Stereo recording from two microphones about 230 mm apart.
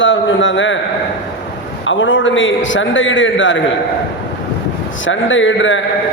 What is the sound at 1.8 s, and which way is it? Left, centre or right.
A man's voice, left.